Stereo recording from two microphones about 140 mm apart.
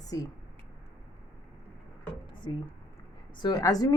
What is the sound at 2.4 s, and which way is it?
A woman's voice, 35° left (ahead or behind).